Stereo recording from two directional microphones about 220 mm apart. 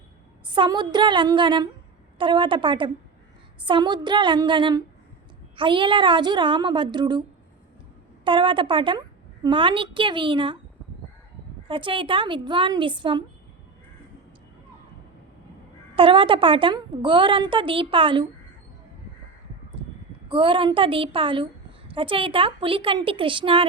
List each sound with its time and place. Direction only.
0.4 s a woman's voice: 20° right (ahead or behind)
8.2 s a woman's voice: 20° right (ahead or behind)
11.7 s a woman's voice: 25° right (ahead or behind)
16.0 s a woman's voice: 25° right (ahead or behind)
19.8 s a sound: 25° right (ahead or behind)
20.2 s a woman's voice: 20° right (ahead or behind)